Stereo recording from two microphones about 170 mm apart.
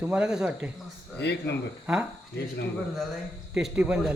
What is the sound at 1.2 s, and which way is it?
Speech, 80° left.